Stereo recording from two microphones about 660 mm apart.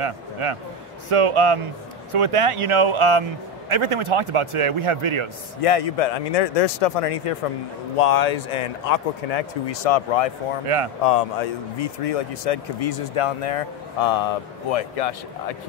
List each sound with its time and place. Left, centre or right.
0.0 s a man's voice: right
5.6 s speech: left
8.0 s speech: left
11.1 s speech: left